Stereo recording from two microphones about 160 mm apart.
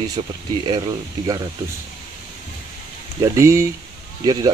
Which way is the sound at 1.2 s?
25° right (ahead or behind).